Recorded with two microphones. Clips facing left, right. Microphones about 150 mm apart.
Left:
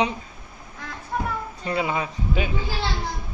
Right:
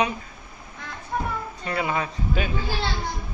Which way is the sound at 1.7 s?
20° left (ahead or behind).